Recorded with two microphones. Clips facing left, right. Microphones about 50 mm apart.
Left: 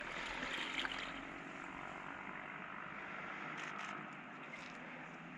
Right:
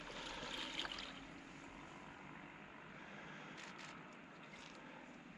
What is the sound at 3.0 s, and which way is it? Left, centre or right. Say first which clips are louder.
Vehicle: left 6 dB; left.